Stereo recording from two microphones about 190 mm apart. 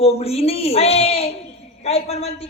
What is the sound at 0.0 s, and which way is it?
Speech, 30° left (ahead or behind).